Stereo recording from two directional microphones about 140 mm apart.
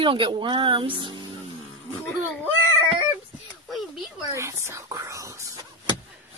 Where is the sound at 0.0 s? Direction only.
35° right (ahead or behind).